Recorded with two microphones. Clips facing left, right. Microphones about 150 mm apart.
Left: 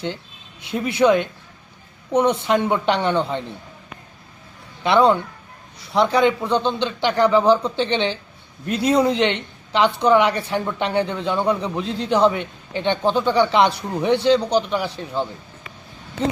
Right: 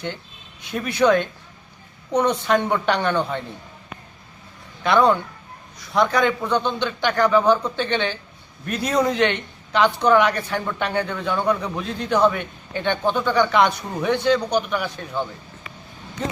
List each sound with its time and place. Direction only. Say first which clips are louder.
0.7 s speech: left 1 dB; 25° left (ahead or behind)
4.8 s speech: left 1 dB; 25° left (ahead or behind)